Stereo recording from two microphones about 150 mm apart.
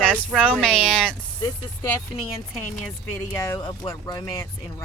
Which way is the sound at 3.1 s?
20° left (ahead or behind).